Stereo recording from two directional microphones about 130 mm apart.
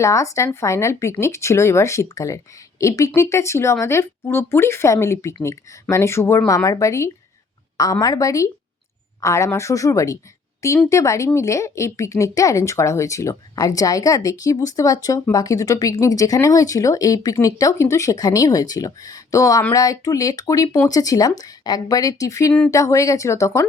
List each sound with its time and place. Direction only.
0.0 s speech: 25° left (ahead or behind)